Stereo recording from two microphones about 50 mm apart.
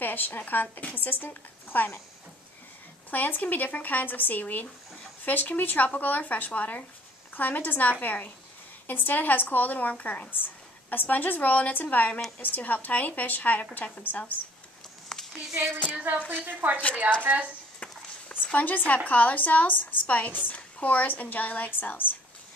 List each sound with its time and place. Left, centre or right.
0.0 s a woman's voice: left
3.1 s a woman's voice: left
10.3 s a woman's voice: left
15.1 s a sound: centre
16.1 s a woman's voice: right
18.3 s a sound: left
19.0 s a woman's voice: left